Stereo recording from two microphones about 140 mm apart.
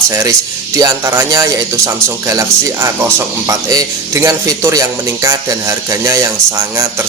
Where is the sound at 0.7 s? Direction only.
25° right (ahead or behind).